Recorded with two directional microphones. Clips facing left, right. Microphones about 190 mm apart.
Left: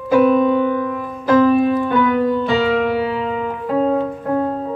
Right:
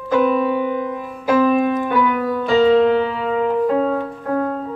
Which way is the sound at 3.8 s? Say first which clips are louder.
Left 2 dB; 20° left (ahead or behind).